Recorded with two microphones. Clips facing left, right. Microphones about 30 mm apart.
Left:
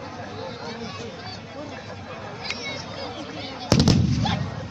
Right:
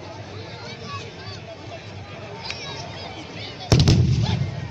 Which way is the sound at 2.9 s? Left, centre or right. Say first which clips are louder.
Left 2 dB; centre.